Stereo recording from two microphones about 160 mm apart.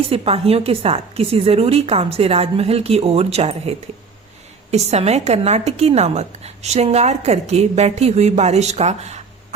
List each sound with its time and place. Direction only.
0.1 s a woman's voice: 40° right (ahead or behind)